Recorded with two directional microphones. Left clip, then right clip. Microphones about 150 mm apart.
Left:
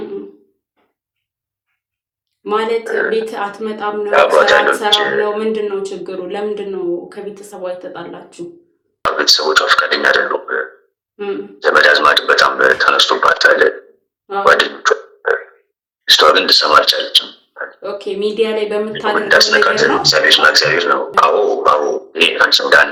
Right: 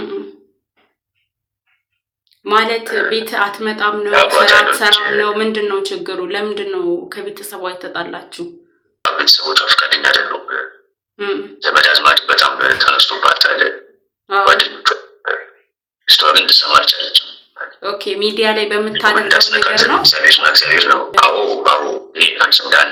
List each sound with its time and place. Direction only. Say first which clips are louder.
2.4 s a woman's voice: right 3 dB; centre (ahead or behind)
4.1 s speech: even; 35° left (ahead or behind)
5.2 s speech: right 1 dB; 5° left (ahead or behind)
9.0 s speech: even; 45° left (ahead or behind)
14.4 s beatboxing: left 2 dB; 45° left (ahead or behind)
16.1 s speech: even; 45° left (ahead or behind)
17.5 s a sound: left 1 dB; 35° left (ahead or behind)
17.7 s speech: right 3 dB; centre (ahead or behind)
19.1 s speech: left 4 dB; 30° left (ahead or behind)